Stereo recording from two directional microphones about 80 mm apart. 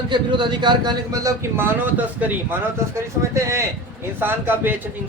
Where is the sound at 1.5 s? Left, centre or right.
Right.